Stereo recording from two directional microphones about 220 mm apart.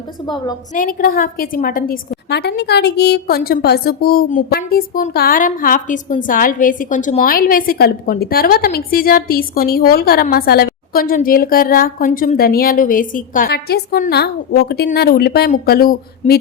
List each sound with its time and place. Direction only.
0.3 s a woman's voice: 20° left (ahead or behind)
0.7 s a woman's voice: 40° left (ahead or behind)